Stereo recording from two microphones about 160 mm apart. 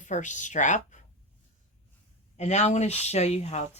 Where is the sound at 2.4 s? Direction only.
45° left (ahead or behind).